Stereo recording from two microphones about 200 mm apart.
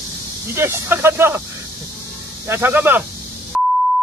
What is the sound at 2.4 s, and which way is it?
Speech, 10° right (ahead or behind).